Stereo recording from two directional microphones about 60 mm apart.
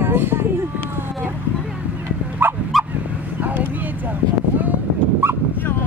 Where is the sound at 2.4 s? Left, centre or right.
Right.